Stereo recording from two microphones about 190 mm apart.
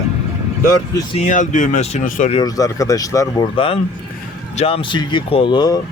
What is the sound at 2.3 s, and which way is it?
Speech, 20° left (ahead or behind).